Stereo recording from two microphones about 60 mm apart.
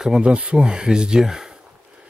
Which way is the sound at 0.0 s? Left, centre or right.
Centre.